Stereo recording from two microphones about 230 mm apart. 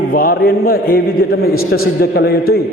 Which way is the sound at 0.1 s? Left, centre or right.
Left.